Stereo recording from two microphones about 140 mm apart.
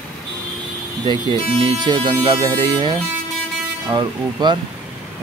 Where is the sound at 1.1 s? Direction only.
35° right (ahead or behind).